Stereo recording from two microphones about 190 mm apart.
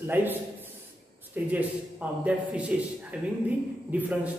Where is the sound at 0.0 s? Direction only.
10° right (ahead or behind).